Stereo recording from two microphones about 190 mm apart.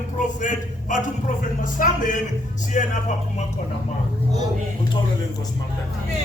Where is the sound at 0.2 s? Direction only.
40° left (ahead or behind).